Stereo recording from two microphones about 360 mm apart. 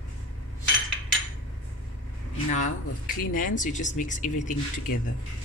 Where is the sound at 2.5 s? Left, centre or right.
Left.